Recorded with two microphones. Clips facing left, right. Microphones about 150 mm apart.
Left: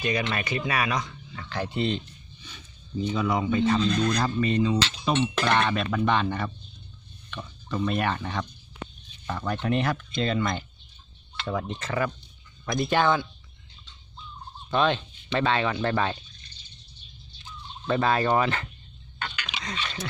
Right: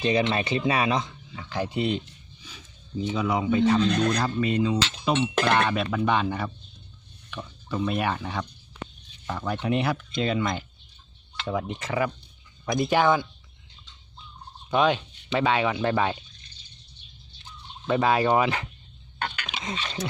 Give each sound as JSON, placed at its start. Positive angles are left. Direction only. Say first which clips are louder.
{"t": 0.0, "sound": "speech", "louder": "right 4 dB", "side_deg": -25}
{"t": 1.4, "sound": "speech", "louder": "right 1 dB", "side_deg": -10}
{"t": 3.8, "sound": "speech", "louder": "right 1 dB", "side_deg": -60}
{"t": 4.2, "sound": "speech", "louder": "even", "side_deg": -5}
{"t": 14.7, "sound": "speech", "louder": "right 2 dB", "side_deg": -10}
{"t": 17.8, "sound": "speech", "louder": "right 2 dB", "side_deg": -10}
{"t": 19.2, "sound": "a sound", "louder": "right 3 dB", "side_deg": -50}
{"t": 19.6, "sound": "speech", "louder": "right 2 dB", "side_deg": -25}